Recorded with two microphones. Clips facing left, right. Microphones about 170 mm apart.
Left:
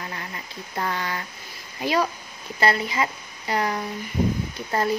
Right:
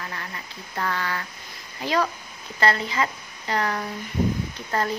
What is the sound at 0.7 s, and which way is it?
A woman's voice, 20° left (ahead or behind).